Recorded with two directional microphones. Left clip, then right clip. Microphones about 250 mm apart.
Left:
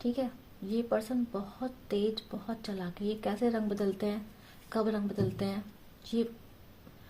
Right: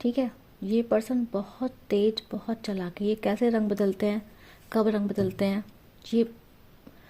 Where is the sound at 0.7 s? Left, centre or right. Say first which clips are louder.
Right 6 dB; right.